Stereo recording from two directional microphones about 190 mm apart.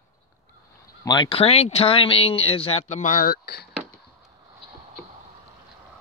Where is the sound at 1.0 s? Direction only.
20° left (ahead or behind); by 3.6 s 50° left (ahead or behind).